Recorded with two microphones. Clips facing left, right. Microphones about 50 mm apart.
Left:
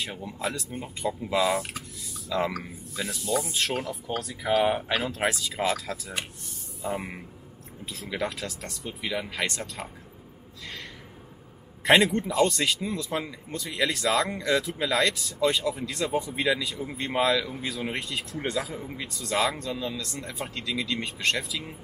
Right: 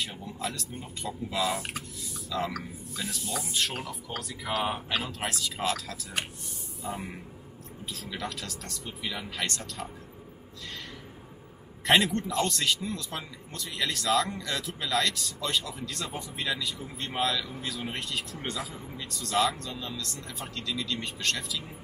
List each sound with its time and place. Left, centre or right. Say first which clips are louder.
0.1 s speech: left 4 dB; centre
3.4 s speech: left 3 dB; centre
6.9 s speech: left 4 dB; left
12.0 s speech: left 5 dB; centre
20.2 s speech: left 4 dB; centre